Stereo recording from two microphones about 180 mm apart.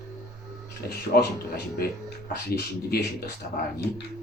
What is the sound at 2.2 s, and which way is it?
Speech, 60° left (ahead or behind).